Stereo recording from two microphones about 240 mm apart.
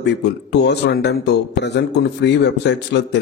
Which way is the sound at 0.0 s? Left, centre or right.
Left.